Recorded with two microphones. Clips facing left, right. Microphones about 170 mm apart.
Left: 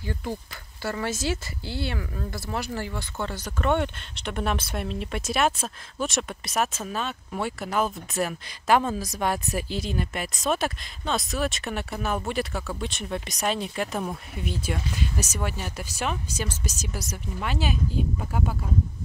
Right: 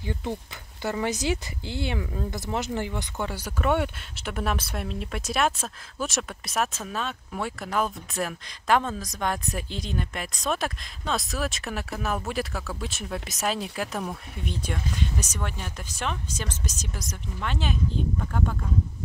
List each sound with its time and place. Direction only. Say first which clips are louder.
0.0 s speech: right 1 dB; 20° right (ahead or behind); by 18.6 s 10° left (ahead or behind)